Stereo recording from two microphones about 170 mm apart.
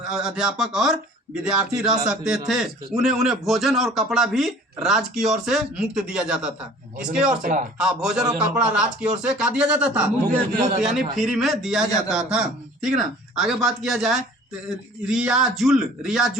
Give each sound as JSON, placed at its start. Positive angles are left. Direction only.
{"t": 0.0, "sound": "a man's voice", "side_deg": -5}
{"t": 7.4, "sound": "speech", "side_deg": -50}
{"t": 7.8, "sound": "a man's voice", "side_deg": -5}
{"t": 11.2, "sound": "a man's voice", "side_deg": 0}